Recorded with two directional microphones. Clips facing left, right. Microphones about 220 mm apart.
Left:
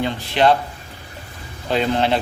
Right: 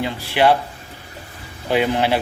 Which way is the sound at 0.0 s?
10° right (ahead or behind).